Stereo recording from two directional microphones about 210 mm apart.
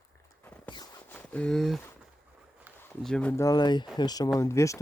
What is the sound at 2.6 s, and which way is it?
Speech, 5° right (ahead or behind).